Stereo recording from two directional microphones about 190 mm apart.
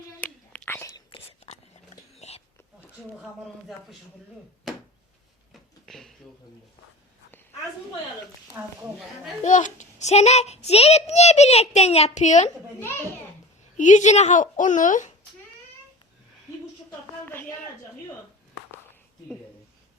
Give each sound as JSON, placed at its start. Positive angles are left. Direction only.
{"t": 0.2, "sound": "whispering", "side_deg": 10}
{"t": 1.1, "sound": "whispering", "side_deg": 35}
{"t": 5.8, "sound": "a sound", "side_deg": 0}
{"t": 9.4, "sound": "a child's voice", "side_deg": 40}
{"t": 13.7, "sound": "a child's voice", "side_deg": 40}